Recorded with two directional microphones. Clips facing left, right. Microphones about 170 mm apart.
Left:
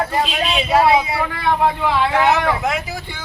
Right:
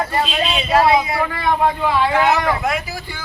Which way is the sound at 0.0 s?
5° left (ahead or behind).